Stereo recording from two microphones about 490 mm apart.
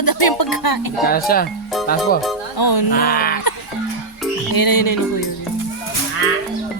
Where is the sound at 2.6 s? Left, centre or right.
Left.